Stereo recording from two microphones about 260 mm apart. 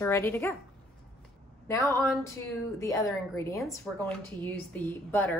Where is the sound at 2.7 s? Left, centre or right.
Centre.